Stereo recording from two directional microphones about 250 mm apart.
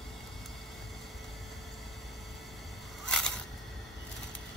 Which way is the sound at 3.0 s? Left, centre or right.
Centre.